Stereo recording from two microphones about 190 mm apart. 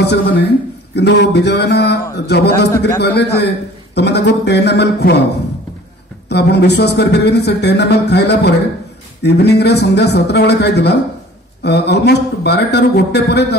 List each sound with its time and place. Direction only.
0.0 s speech: 65° left (ahead or behind)
6.2 s speech: 60° left (ahead or behind)